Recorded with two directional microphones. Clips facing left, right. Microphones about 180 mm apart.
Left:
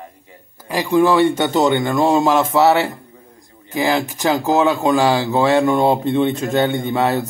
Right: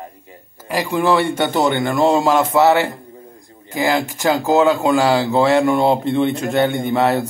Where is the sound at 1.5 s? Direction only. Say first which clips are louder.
Left 1 dB; 20° left (ahead or behind).